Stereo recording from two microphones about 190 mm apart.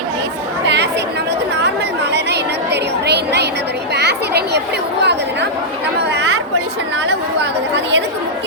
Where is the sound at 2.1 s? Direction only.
60° right (ahead or behind).